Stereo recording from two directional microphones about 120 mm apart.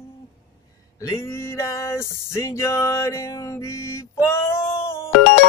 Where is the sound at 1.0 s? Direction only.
25° left (ahead or behind).